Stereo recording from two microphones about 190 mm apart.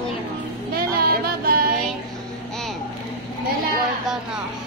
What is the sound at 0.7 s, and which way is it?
Music, 50° right (ahead or behind).